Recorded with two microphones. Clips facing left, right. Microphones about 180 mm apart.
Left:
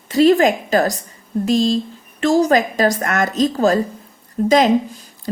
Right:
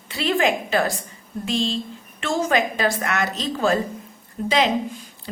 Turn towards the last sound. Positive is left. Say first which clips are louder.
# left 7 dB
turn(degrees=45)  # may be behind; listen again after turning